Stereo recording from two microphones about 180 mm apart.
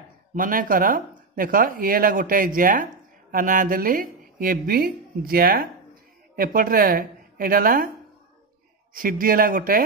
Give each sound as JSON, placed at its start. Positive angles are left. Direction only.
{"t": 0.3, "sound": "speech", "side_deg": -50}
{"t": 8.9, "sound": "speech", "side_deg": -50}